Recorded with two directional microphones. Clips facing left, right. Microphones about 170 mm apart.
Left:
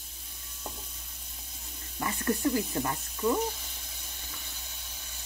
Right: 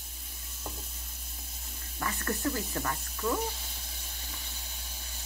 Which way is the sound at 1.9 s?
15° left (ahead or behind).